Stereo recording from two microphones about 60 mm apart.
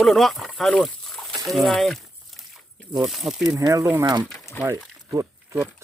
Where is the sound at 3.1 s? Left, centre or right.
Centre.